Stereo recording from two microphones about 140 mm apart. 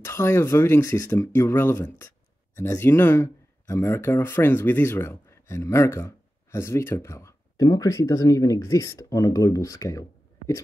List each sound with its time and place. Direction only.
0.0 s speech: 20° left (ahead or behind)